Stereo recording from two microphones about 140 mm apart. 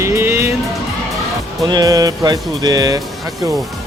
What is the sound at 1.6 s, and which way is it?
Speech, 25° right (ahead or behind).